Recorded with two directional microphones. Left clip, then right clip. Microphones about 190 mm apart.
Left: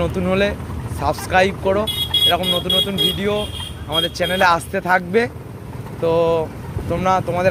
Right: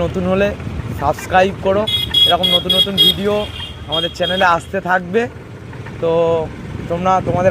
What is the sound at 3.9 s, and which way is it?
Speech, 10° right (ahead or behind).